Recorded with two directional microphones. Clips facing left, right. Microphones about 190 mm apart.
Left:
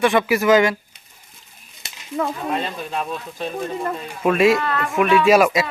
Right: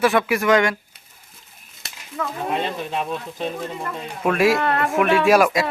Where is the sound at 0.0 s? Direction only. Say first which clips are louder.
Left 1 dB; centre (ahead or behind).